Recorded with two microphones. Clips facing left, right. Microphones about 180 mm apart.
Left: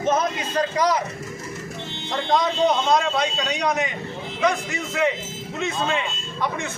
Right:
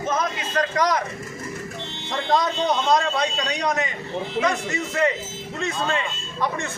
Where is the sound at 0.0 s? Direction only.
25° left (ahead or behind).